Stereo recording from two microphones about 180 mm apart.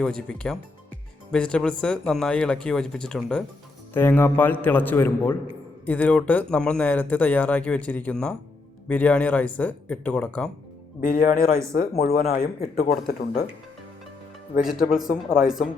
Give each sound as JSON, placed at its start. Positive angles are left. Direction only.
{"t": 0.0, "sound": "speech", "side_deg": 5}
{"t": 11.0, "sound": "speech", "side_deg": 50}
{"t": 12.5, "sound": "speech", "side_deg": 35}
{"t": 14.6, "sound": "speech", "side_deg": 0}